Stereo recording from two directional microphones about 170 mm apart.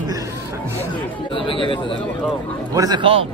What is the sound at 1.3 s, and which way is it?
Speech, 30° left (ahead or behind).